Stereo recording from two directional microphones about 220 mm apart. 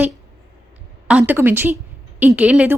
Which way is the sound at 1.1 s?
5° right (ahead or behind).